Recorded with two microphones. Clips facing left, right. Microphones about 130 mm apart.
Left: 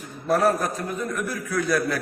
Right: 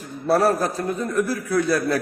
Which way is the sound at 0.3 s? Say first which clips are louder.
Right 2 dB; 35° right (ahead or behind).